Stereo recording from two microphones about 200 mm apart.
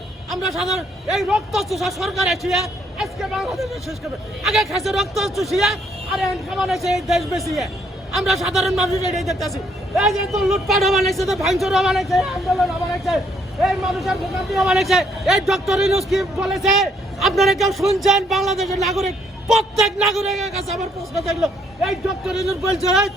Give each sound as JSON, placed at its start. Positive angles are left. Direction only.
{"t": 0.3, "sound": "a man's voice", "side_deg": 0}